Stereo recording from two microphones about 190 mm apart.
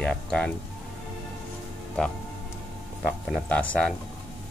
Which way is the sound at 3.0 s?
Centre (ahead or behind).